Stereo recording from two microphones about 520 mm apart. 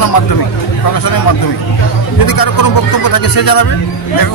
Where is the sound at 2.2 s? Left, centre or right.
Left.